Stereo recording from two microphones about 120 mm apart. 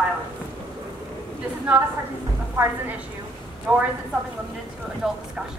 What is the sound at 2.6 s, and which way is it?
A woman's voice, 15° right (ahead or behind).